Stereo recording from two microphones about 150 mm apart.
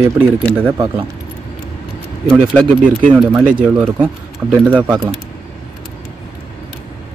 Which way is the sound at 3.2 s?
10° right (ahead or behind).